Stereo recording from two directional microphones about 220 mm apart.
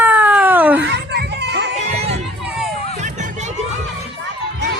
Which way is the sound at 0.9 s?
50° right (ahead or behind).